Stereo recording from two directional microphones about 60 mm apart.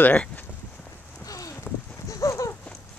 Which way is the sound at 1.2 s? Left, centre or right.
Left.